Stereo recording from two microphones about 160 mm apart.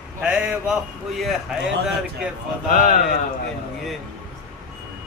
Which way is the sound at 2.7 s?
55° left (ahead or behind).